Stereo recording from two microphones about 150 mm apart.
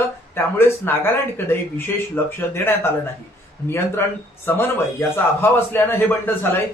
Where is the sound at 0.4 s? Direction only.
15° left (ahead or behind).